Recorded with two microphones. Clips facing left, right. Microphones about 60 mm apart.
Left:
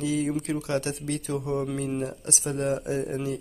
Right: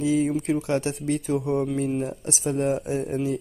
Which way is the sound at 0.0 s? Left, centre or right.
Right.